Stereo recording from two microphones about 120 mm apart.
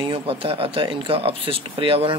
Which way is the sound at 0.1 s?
50° right (ahead or behind).